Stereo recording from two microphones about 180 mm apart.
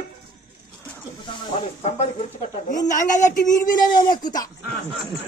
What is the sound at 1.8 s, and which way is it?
Speech, 40° left (ahead or behind).